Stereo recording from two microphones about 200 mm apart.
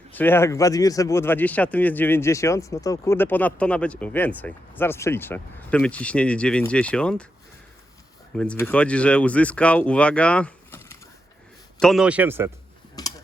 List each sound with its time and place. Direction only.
0.1 s speech: 10° left (ahead or behind)
8.4 s speech: 10° left (ahead or behind)
11.8 s a man's voice: centre (ahead or behind)
13.0 s tick-tock: 20° left (ahead or behind)